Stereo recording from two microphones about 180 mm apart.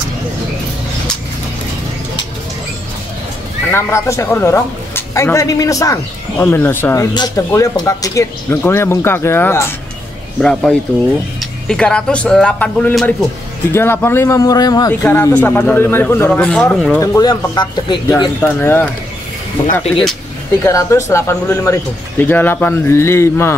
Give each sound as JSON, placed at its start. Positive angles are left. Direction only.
{"t": 3.7, "sound": "a woman's voice", "side_deg": 15}
{"t": 17.0, "sound": "speech", "side_deg": 20}
{"t": 18.4, "sound": "a woman's voice", "side_deg": 10}
{"t": 19.6, "sound": "speech", "side_deg": 35}
{"t": 20.6, "sound": "a woman's voice", "side_deg": 15}